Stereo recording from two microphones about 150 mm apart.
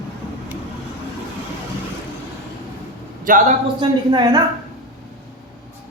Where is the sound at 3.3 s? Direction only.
60° right (ahead or behind).